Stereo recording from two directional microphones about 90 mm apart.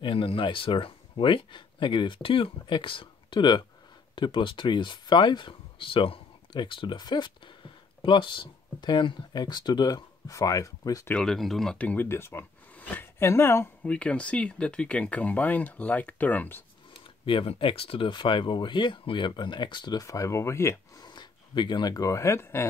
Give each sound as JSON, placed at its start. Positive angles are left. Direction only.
{"t": 0.0, "sound": "speech", "side_deg": 75}
{"t": 6.5, "sound": "speech", "side_deg": 65}
{"t": 11.1, "sound": "speech", "side_deg": 5}
{"t": 11.8, "sound": "speech", "side_deg": 15}
{"t": 12.1, "sound": "speech", "side_deg": 30}
{"t": 12.7, "sound": "a sound", "side_deg": 20}
{"t": 13.2, "sound": "speech", "side_deg": 30}
{"t": 13.8, "sound": "speech", "side_deg": 15}
{"t": 17.2, "sound": "speech", "side_deg": 85}
{"t": 20.0, "sound": "speech", "side_deg": 40}
{"t": 21.0, "sound": "a sound", "side_deg": 55}
{"t": 21.9, "sound": "speech", "side_deg": 35}